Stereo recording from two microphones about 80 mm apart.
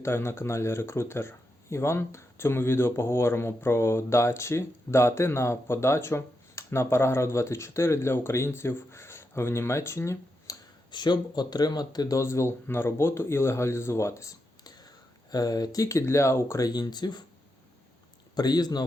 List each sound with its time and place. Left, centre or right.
0.0 s speech: left
10.9 s speech: left
12.1 s speech: left
15.3 s speech: left
16.6 s speech: left
18.3 s speech: left